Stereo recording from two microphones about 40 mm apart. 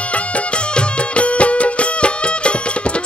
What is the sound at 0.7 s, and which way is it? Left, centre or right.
Music, left.